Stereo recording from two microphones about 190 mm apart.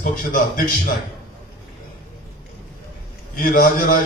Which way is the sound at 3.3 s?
50° left (ahead or behind).